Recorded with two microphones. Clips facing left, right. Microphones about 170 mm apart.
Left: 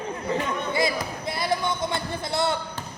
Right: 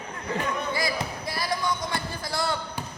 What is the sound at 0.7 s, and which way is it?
Basketball bounce, 25° left (ahead or behind).